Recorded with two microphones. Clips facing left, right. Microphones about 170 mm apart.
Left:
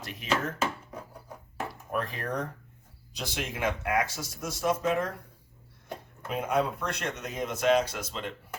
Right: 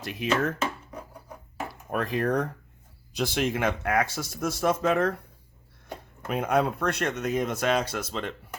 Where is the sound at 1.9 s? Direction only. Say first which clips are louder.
Right 7 dB; 70° right (ahead or behind).